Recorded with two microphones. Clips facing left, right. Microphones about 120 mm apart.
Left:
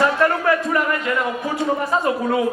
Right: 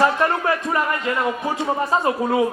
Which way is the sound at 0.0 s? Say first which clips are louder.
Left 1 dB; 25° right (ahead or behind).